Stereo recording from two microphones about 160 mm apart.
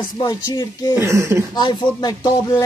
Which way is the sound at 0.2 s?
25° left (ahead or behind).